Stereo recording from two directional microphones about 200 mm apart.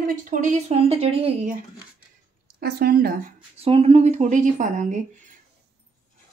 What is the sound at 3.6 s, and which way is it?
A woman's voice, 30° right (ahead or behind).